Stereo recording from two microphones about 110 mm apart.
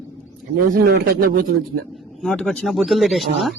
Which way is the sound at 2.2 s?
5° left (ahead or behind).